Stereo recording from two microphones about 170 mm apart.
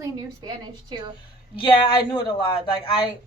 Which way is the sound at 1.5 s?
30° left (ahead or behind).